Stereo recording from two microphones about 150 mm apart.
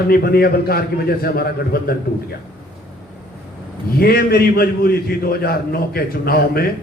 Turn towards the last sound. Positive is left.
turn(degrees=90)